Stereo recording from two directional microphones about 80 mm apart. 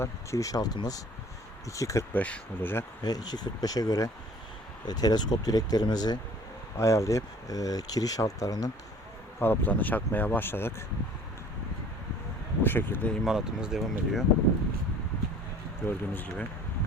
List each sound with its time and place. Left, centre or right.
0.0 s speech: left
1.7 s speech: left
2.1 s speech: centre
3.0 s speech: left
6.7 s speech: left
9.4 s speech: left
12.6 s speech: left
13.2 s speech: centre
15.9 s speech: left